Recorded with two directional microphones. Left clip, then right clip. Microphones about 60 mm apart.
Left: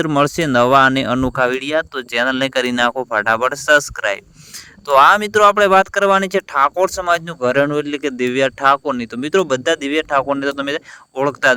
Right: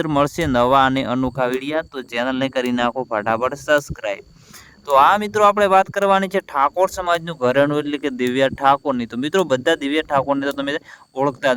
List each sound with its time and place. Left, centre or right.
0.2 s speech: left
4.9 s speech: left
5.2 s speech: left
7.3 s speech: centre
8.6 s speech: left
9.1 s speech: centre
9.6 s speech: centre
11.2 s speech: left